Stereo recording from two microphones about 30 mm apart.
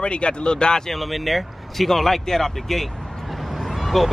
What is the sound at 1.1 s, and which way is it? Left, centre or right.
Speech, centre.